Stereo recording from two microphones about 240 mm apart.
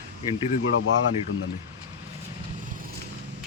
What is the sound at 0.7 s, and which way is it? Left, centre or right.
Speech, left.